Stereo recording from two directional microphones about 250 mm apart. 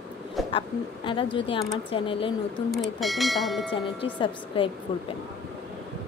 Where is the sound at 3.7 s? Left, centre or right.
Centre.